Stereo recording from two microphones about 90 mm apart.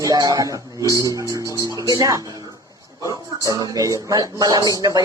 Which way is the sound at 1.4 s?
40° right (ahead or behind).